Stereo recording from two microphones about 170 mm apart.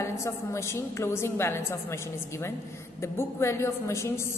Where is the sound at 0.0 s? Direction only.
15° left (ahead or behind).